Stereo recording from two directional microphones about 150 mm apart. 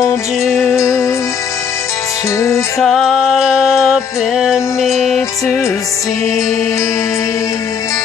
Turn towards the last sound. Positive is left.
turn(degrees=20)  # may be behind; listen again after turning